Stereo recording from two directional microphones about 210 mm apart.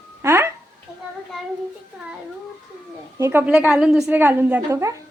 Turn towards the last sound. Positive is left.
turn(degrees=-15)  # may be behind; listen again after turning